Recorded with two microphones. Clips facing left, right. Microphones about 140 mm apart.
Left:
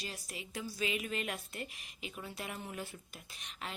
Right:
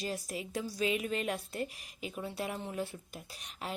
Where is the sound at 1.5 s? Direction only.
35° right (ahead or behind).